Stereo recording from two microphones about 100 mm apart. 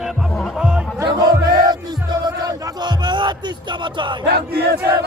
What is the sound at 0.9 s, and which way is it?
Music, 30° right (ahead or behind).